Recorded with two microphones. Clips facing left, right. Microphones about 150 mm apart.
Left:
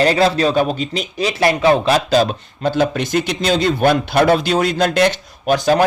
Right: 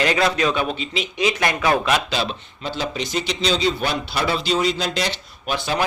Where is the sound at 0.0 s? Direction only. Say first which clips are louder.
Left 5 dB; 35° left (ahead or behind).